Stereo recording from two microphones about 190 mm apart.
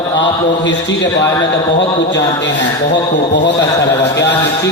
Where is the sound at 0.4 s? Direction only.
70° left (ahead or behind).